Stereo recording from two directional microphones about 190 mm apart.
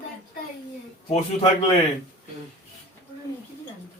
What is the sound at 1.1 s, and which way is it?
Speech, 30° left (ahead or behind).